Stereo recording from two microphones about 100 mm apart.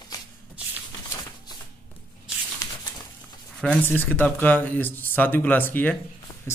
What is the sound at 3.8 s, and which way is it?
Speech, 15° left (ahead or behind).